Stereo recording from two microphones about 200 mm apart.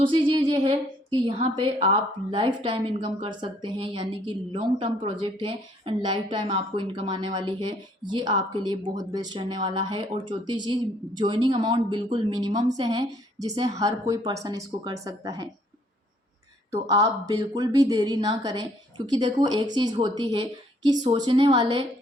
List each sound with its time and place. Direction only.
0.0 s a woman's voice: 25° right (ahead or behind)
16.9 s a woman's voice: 20° right (ahead or behind)